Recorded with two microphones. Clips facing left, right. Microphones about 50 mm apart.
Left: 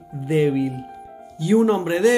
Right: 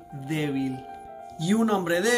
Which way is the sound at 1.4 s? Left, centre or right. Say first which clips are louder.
Left 6 dB; left.